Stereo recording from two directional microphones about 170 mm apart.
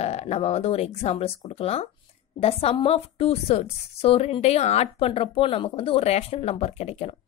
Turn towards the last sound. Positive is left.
turn(degrees=35)  # may be behind; listen again after turning